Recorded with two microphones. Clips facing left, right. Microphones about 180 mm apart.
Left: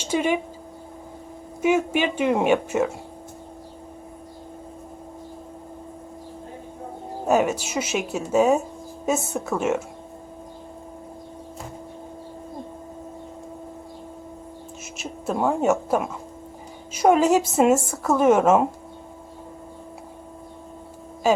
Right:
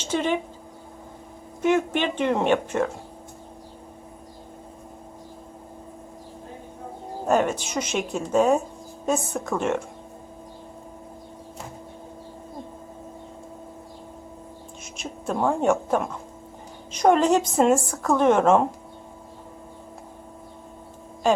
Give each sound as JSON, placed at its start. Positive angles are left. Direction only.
{"t": 0.0, "sound": "speech", "side_deg": 10}
{"t": 1.6, "sound": "a woman's voice", "side_deg": 10}
{"t": 7.3, "sound": "a woman's voice", "side_deg": 5}
{"t": 14.9, "sound": "a woman's voice", "side_deg": 5}
{"t": 21.2, "sound": "speech", "side_deg": 5}